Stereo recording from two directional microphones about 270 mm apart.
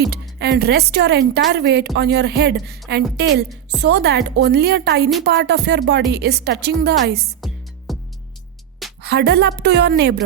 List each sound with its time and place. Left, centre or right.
0.1 s speech: right
7.4 s music: centre
9.0 s speech: right